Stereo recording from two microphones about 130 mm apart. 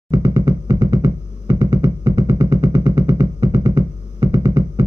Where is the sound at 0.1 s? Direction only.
35° right (ahead or behind).